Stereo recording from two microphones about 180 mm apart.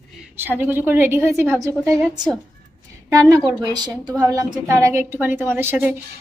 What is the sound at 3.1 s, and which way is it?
A woman's voice, 20° right (ahead or behind).